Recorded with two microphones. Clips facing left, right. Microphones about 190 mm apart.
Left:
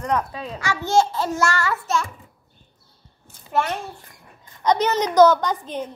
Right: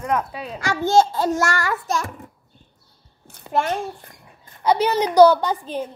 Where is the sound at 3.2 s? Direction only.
65° right (ahead or behind).